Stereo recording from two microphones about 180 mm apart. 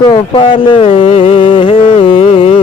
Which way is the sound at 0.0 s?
30° left (ahead or behind).